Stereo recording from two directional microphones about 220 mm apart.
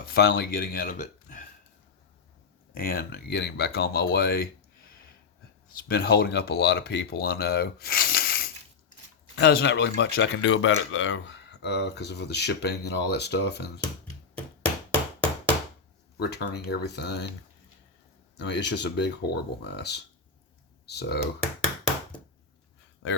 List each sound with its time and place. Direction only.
0.1 s speech: 45° left (ahead or behind)
2.7 s speech: 40° left (ahead or behind)
5.9 s speech: 45° left (ahead or behind)
16.1 s speech: 45° left (ahead or behind)
18.3 s speech: 50° left (ahead or behind)
23.0 s speech: 60° left (ahead or behind)